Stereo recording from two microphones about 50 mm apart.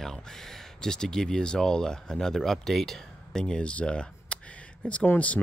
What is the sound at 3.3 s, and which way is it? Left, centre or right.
Speech, centre.